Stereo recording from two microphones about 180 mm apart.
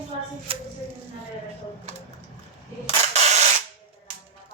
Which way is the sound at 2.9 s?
40° right (ahead or behind).